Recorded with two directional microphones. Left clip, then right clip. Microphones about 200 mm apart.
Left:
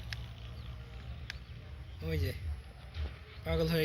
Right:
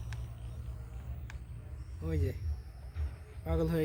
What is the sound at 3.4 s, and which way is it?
Music, 45° right (ahead or behind).